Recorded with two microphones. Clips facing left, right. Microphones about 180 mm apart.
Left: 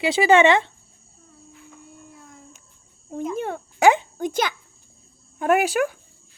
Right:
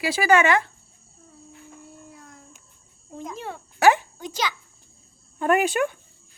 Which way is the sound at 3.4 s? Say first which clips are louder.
Left 7 dB; 55° left (ahead or behind).